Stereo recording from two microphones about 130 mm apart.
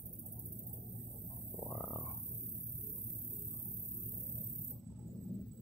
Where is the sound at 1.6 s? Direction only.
15° left (ahead or behind).